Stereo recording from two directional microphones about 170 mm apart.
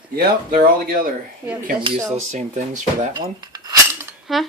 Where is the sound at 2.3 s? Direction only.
45° right (ahead or behind).